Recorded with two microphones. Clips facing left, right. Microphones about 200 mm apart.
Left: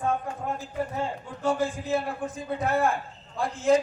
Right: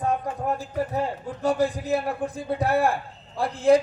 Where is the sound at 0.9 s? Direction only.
35° right (ahead or behind).